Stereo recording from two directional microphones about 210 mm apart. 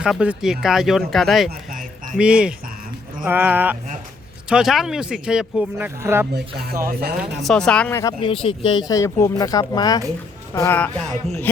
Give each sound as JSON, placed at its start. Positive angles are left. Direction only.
{"t": 0.0, "sound": "speech", "side_deg": -5}
{"t": 6.8, "sound": "speech", "side_deg": -45}
{"t": 7.4, "sound": "speech", "side_deg": 5}
{"t": 8.2, "sound": "speech", "side_deg": 25}